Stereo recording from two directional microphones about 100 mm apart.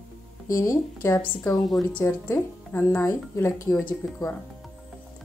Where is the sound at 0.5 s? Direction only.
30° left (ahead or behind).